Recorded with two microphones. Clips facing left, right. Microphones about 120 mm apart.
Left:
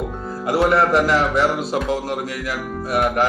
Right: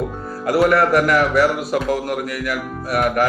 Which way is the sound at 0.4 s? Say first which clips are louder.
Right 1 dB; 25° left (ahead or behind).